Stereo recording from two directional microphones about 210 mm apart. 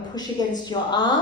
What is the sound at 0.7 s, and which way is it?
Speech, 20° left (ahead or behind).